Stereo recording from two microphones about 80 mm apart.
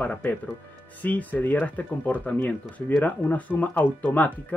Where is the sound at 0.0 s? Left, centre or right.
Centre.